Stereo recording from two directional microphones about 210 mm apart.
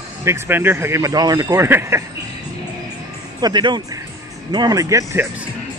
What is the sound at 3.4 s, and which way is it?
Speech, 20° right (ahead or behind).